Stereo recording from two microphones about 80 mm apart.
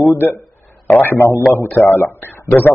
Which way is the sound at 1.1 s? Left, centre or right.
Left.